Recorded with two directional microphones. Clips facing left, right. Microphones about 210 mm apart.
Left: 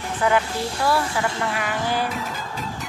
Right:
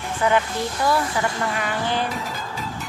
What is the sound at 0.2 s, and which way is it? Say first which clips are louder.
Music: even; 5° left (ahead or behind).